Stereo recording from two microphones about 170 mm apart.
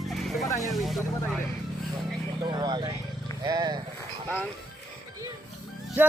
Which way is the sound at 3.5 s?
25° right (ahead or behind).